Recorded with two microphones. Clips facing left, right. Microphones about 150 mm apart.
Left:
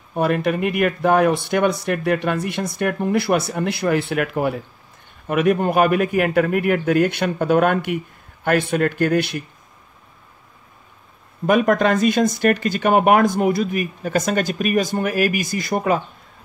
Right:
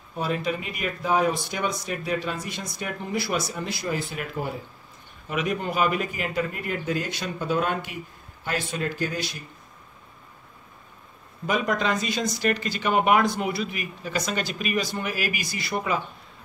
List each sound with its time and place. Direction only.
0.1 s speech: 60° left (ahead or behind)
5.2 s speech: 55° left (ahead or behind)
11.4 s speech: 55° left (ahead or behind)